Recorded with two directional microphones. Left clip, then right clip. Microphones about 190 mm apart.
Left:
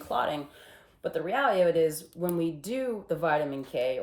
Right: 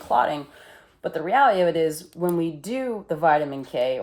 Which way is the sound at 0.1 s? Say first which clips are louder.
Right 8 dB; 20° right (ahead or behind).